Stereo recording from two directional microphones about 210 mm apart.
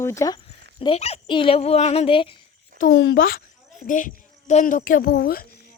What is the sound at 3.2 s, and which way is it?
A woman's voice, 40° left (ahead or behind).